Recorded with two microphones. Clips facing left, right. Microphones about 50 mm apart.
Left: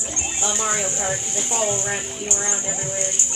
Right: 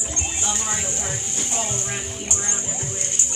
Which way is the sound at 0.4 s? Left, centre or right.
Centre.